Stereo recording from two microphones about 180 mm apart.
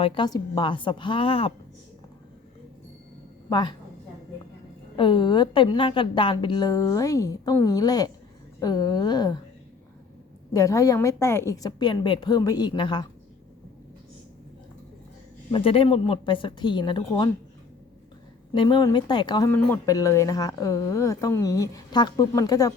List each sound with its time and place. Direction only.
0.0 s speech: 25° left (ahead or behind)
3.5 s speech: 25° left (ahead or behind)
4.9 s speech: 25° left (ahead or behind)
10.5 s speech: 20° left (ahead or behind)
15.5 s speech: 30° left (ahead or behind)
18.5 s speech: 25° left (ahead or behind)